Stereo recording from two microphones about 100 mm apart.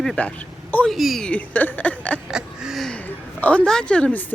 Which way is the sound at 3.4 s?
15° left (ahead or behind).